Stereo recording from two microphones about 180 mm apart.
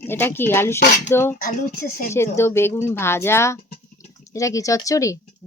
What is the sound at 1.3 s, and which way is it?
Speech, 55° left (ahead or behind).